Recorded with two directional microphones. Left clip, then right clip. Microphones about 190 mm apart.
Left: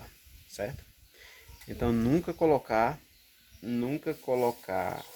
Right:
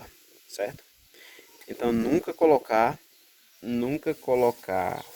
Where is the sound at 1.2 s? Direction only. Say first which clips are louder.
Right 4 dB; 40° right (ahead or behind).